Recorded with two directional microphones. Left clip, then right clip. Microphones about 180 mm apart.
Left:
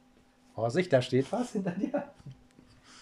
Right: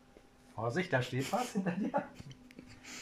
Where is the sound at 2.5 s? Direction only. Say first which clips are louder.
Right 6 dB; centre (ahead or behind).